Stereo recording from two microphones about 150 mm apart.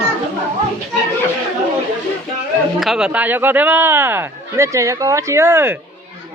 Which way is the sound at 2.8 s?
5° right (ahead or behind).